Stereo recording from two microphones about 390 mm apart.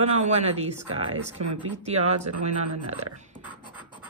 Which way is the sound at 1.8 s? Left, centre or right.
Centre.